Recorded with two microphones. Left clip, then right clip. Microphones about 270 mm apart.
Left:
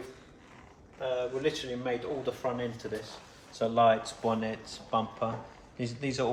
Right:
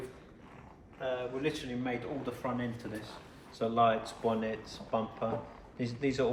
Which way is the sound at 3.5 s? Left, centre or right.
Left.